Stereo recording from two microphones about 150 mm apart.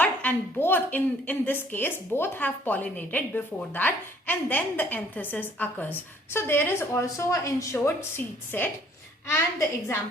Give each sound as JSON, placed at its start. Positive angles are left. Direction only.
{"t": 0.0, "sound": "a woman's voice", "side_deg": 10}